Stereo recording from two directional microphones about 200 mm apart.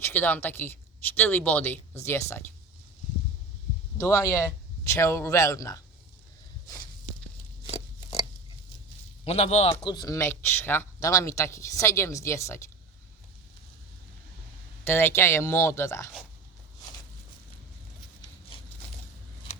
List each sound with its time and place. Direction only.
0.0 s a man's voice: 10° left (ahead or behind)
3.9 s a man's voice: 15° left (ahead or behind)
9.2 s a man's voice: 30° left (ahead or behind); by 12.6 s 15° left (ahead or behind)
14.8 s a man's voice: 10° left (ahead or behind)